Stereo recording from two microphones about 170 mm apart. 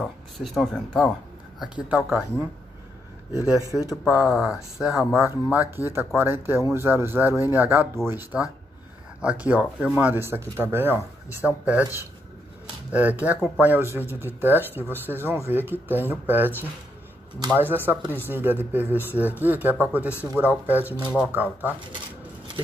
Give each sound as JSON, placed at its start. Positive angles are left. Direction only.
{"t": 0.4, "sound": "speech", "side_deg": 0}
{"t": 3.5, "sound": "speech", "side_deg": -20}
{"t": 3.9, "sound": "speech", "side_deg": -5}
{"t": 12.9, "sound": "speech", "side_deg": -10}